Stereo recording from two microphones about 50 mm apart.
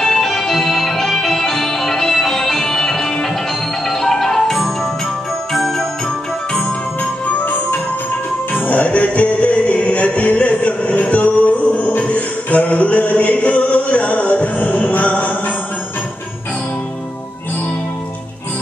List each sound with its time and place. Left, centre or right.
0.0 s music: centre
8.5 s music: left